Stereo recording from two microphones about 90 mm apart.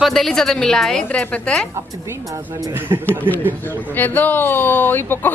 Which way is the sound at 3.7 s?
20° left (ahead or behind).